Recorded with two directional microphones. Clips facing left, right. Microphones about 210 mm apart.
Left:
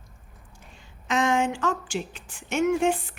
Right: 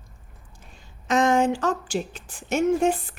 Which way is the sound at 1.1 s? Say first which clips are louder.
Right 4 dB; 40° right (ahead or behind).